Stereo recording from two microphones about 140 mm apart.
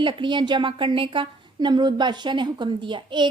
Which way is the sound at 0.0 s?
35° right (ahead or behind).